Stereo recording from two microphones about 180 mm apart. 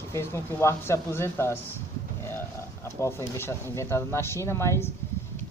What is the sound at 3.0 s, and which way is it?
Speech, 15° left (ahead or behind).